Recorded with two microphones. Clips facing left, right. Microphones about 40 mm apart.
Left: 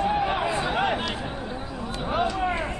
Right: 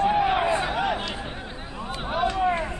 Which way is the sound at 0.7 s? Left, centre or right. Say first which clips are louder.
Left 1 dB; centre.